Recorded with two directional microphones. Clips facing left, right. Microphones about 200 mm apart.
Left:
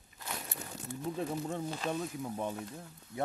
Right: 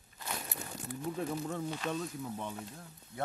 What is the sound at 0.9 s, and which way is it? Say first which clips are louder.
Speech: even; 25° left (ahead or behind).